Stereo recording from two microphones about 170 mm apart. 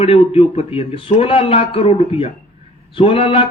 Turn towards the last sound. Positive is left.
turn(degrees=35)  # may be behind; listen again after turning